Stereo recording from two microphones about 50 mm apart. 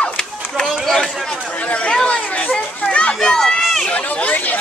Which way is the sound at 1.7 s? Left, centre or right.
Left.